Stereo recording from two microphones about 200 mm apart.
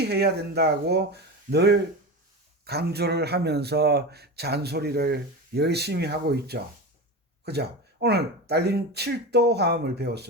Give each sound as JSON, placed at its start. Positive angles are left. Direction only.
{"t": 0.0, "sound": "speech", "side_deg": -55}